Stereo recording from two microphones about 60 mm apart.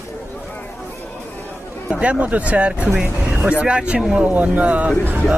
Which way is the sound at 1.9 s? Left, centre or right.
Right.